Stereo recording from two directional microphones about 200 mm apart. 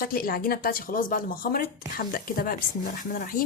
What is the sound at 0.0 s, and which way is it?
Speech, 45° left (ahead or behind).